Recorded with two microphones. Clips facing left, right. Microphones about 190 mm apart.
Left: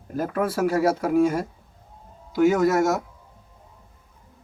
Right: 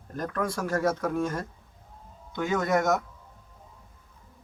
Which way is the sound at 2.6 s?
5° left (ahead or behind).